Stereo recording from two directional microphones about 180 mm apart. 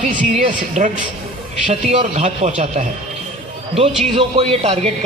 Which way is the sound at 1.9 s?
35° right (ahead or behind).